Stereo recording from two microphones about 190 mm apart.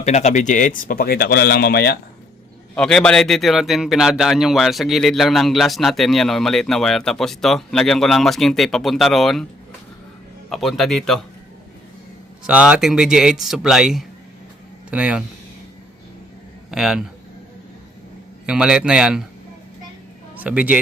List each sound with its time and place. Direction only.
0.0 s speech: 35° left (ahead or behind); by 2.0 s 55° left (ahead or behind)
2.7 s a man's voice: 5° left (ahead or behind)
10.5 s a man's voice: centre (ahead or behind)
12.5 s a man's voice: 5° right (ahead or behind)
16.7 s a man's voice: 5° right (ahead or behind)
18.4 s a man's voice: 5° right (ahead or behind)
20.3 s speech: 10° right (ahead or behind)